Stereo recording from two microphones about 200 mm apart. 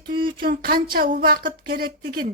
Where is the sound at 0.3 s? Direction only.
45° right (ahead or behind).